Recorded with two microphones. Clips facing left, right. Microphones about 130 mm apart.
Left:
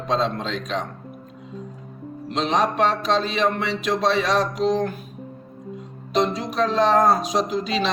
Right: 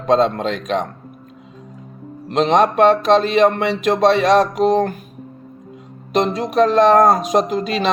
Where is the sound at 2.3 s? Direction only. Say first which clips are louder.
Right 7 dB; 60° right (ahead or behind).